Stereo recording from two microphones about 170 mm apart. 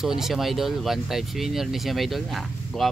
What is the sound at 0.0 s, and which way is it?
Speech, centre (ahead or behind).